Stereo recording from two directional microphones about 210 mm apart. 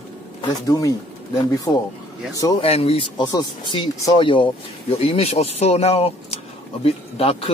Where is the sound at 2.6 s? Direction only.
30° left (ahead or behind).